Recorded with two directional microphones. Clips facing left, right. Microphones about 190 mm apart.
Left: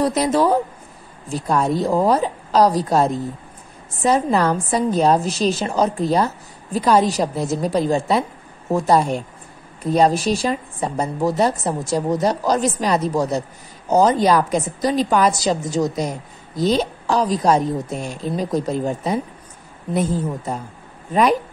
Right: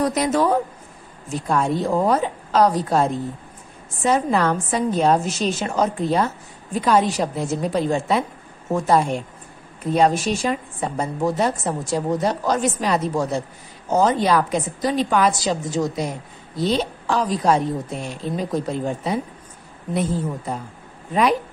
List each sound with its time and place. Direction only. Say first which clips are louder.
0.0 s a woman's voice: left 2 dB; 30° left (ahead or behind)